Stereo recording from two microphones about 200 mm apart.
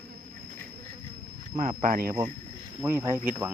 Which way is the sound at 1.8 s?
45° right (ahead or behind).